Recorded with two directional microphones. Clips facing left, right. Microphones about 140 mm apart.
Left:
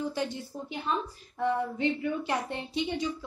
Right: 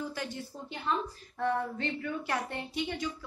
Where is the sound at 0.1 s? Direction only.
20° left (ahead or behind).